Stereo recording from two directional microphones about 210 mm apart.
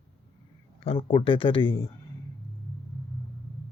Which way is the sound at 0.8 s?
25° left (ahead or behind).